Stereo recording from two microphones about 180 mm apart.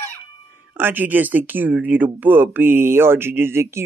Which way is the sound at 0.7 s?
10° right (ahead or behind).